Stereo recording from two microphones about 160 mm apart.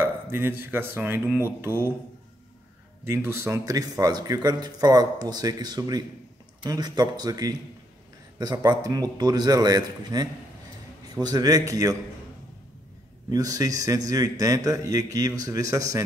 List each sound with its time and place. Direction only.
0.0 s speech: 15° right (ahead or behind)
3.1 s speech: 15° right (ahead or behind)
13.3 s speech: 20° right (ahead or behind)